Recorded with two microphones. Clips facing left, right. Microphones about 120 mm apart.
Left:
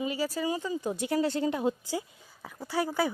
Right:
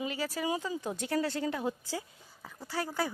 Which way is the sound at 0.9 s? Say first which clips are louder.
Left 4 dB; 15° left (ahead or behind).